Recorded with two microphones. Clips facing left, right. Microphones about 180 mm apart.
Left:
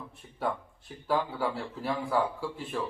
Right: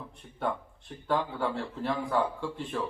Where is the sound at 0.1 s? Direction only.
5° left (ahead or behind).